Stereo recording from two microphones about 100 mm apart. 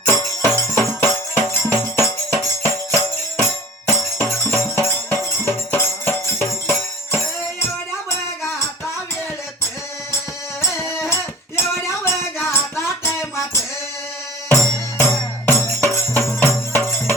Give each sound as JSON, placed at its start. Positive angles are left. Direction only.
{"t": 0.1, "sound": "jingle bell", "side_deg": 30}
{"t": 4.4, "sound": "music", "side_deg": 25}
{"t": 10.6, "sound": "music", "side_deg": 25}
{"t": 14.9, "sound": "music", "side_deg": 25}